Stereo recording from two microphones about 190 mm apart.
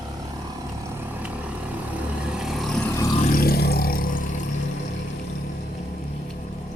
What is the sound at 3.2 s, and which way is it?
Vehicle, 50° left (ahead or behind).